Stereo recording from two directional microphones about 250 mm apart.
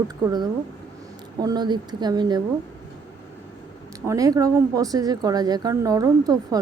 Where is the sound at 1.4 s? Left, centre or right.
Centre.